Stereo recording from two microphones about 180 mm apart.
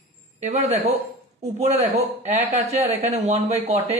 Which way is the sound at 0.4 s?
40° right (ahead or behind).